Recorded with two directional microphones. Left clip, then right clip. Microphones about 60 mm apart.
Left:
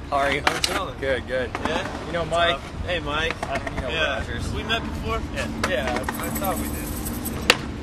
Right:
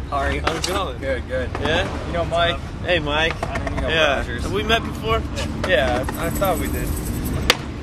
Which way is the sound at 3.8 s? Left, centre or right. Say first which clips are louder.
Right 7 dB; right.